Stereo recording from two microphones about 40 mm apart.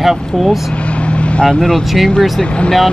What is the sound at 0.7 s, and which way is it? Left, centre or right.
Vehicle, left.